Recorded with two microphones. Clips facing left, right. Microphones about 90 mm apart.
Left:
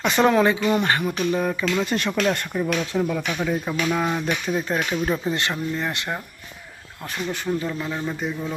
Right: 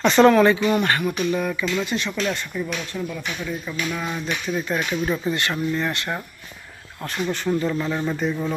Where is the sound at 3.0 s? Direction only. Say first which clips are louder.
Left 6 dB; 80° left.